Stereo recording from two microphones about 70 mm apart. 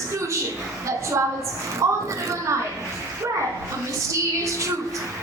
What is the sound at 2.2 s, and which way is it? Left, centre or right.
Speech, right.